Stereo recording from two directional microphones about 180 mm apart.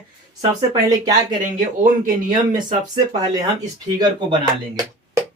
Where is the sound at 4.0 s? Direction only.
25° right (ahead or behind).